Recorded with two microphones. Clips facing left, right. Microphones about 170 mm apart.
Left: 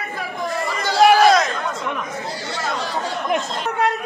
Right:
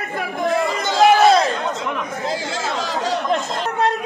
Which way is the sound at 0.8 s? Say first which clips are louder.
Left 1 dB; 20° right (ahead or behind).